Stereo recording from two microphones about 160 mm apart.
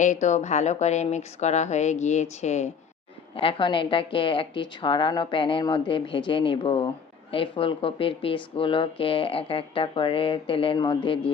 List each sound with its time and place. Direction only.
0.0 s a woman's voice: 50° left (ahead or behind)
3.3 s a woman's voice: 30° left (ahead or behind)